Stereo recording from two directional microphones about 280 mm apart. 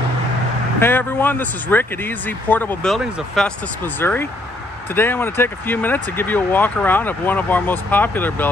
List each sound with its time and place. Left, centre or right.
0.7 s speech: centre